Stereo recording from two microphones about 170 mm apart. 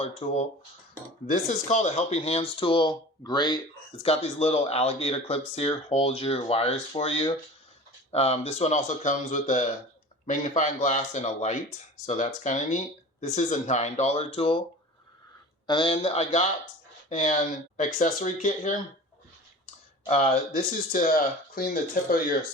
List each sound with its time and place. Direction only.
0.0 s speech: 40° left (ahead or behind)
15.6 s speech: 30° left (ahead or behind); by 18.7 s 45° left (ahead or behind)
20.1 s speech: 45° left (ahead or behind)